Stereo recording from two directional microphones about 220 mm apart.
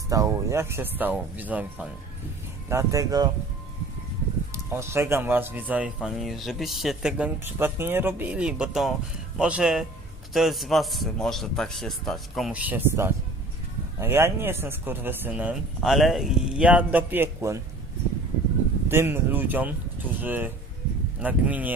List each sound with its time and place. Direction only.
0.1 s speech: 15° right (ahead or behind)
4.5 s a man's voice: 10° right (ahead or behind)
18.9 s speech: 10° right (ahead or behind)